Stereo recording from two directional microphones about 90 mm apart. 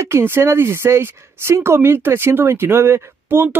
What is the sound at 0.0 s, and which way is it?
Speech, 30° right (ahead or behind).